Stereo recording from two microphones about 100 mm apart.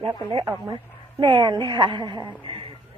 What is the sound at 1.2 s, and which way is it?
A woman's voice, 50° right (ahead or behind).